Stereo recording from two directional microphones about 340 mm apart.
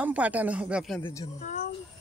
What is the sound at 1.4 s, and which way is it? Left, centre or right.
Speech, left.